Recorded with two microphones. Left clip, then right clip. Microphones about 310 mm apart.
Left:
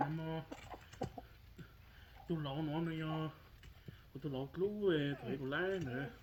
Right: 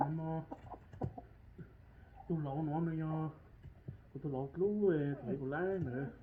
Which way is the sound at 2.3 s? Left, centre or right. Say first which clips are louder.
Right 2 dB; left.